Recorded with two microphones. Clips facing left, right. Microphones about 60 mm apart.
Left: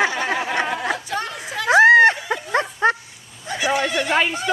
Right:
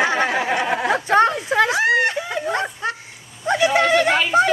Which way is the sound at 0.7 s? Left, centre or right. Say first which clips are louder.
Right 8 dB; right.